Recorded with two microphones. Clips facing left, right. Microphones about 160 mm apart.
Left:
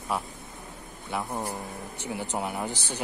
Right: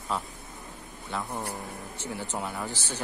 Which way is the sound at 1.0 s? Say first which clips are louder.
Left 2 dB; 15° left (ahead or behind).